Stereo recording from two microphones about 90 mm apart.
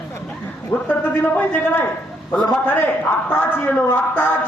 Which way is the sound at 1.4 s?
20° left (ahead or behind).